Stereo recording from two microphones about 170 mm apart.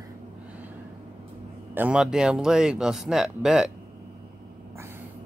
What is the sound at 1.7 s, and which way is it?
Speech, 10° right (ahead or behind).